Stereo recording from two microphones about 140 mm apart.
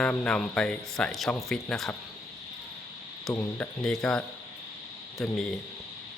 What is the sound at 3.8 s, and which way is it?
Speech, 5° left (ahead or behind).